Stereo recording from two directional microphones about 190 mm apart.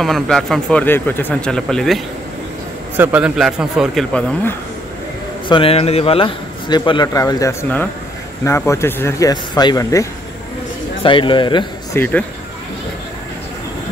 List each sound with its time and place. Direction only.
0.0 s speech: centre (ahead or behind)
3.0 s speech: 10° right (ahead or behind)
5.5 s a man's voice: 30° left (ahead or behind)
11.9 s speech: 10° left (ahead or behind)